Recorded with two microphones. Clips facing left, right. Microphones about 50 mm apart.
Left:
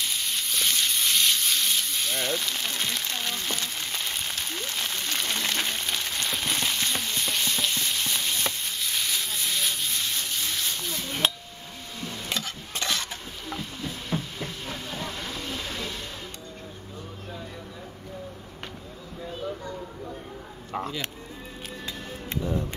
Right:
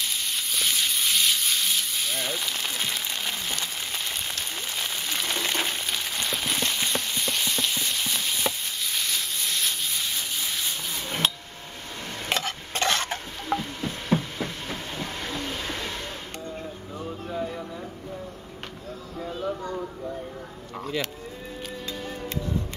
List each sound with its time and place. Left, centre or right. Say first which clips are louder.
0.0 s a sound: even; centre
12.0 s stir: right 4 dB; right
15.0 s train: right 2 dB; right